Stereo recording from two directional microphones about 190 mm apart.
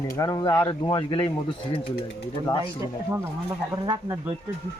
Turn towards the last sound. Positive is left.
turn(degrees=-20)  # may be behind; listen again after turning